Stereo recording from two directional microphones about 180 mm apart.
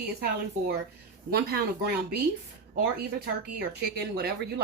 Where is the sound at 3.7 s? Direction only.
60° right (ahead or behind).